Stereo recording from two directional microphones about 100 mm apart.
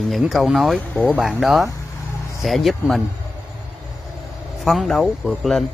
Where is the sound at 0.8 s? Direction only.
15° left (ahead or behind).